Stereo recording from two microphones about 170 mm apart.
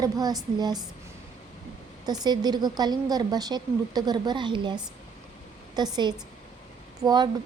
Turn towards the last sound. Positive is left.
turn(degrees=-25)  # may be behind; listen again after turning